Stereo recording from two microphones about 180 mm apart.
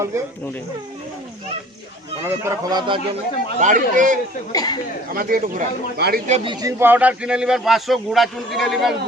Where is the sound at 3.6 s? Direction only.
45° right (ahead or behind).